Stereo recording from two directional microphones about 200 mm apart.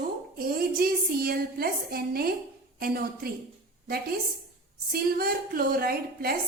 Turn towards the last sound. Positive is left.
turn(degrees=-50)  # may be behind; listen again after turning